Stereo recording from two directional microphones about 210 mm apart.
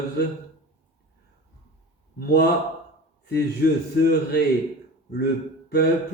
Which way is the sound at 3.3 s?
50° left (ahead or behind).